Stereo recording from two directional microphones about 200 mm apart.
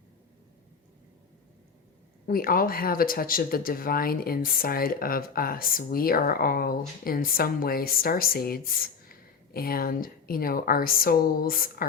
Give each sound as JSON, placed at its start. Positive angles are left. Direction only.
{"t": 2.2, "sound": "speech", "side_deg": 45}